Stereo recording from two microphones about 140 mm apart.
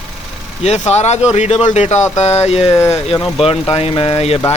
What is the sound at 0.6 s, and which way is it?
Speech, 50° left (ahead or behind).